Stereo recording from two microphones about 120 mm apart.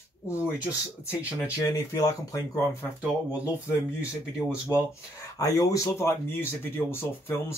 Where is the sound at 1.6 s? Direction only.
25° left (ahead or behind).